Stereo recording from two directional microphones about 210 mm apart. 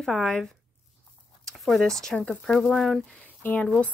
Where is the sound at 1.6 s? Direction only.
Centre (ahead or behind).